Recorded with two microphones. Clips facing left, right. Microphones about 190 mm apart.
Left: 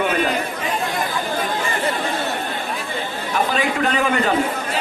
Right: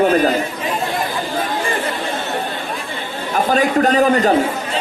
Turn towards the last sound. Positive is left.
turn(degrees=-40)  # may be behind; listen again after turning